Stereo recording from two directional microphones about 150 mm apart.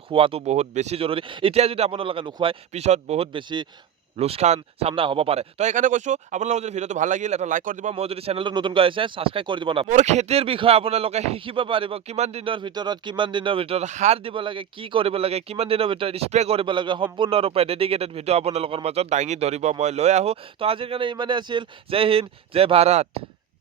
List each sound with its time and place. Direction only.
0.1 s speech: 35° right (ahead or behind)
4.2 s speech: 45° right (ahead or behind)
9.9 s speech: 50° right (ahead or behind)